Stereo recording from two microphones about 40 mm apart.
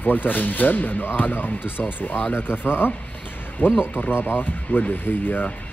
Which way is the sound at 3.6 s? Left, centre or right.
Left.